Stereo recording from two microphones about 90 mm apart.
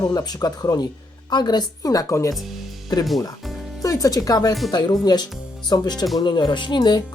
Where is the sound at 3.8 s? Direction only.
40° left (ahead or behind).